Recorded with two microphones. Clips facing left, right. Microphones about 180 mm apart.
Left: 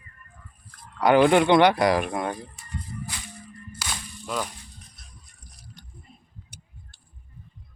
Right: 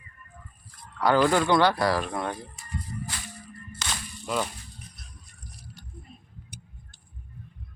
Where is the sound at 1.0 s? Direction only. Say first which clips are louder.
Left 4 dB; 20° left (ahead or behind).